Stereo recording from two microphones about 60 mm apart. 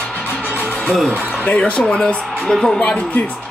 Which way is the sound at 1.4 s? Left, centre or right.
Left.